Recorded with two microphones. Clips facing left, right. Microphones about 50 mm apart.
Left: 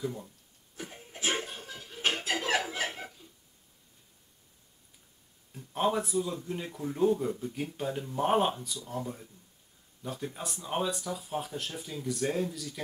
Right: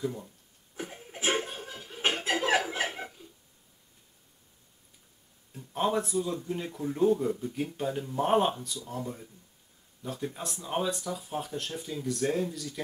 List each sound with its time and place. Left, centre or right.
0.0 s speech: centre
1.3 s laughter: centre
2.1 s chuckle: right
2.9 s a sound: centre
5.5 s speech: centre